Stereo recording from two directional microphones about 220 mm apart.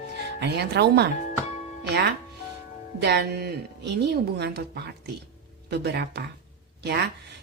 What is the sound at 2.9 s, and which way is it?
Speech, 50° right (ahead or behind).